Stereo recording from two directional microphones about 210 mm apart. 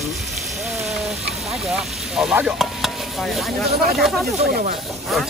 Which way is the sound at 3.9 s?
Centre (ahead or behind).